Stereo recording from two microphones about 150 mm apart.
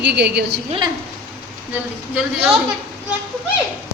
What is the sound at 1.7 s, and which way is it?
Speech, 10° right (ahead or behind).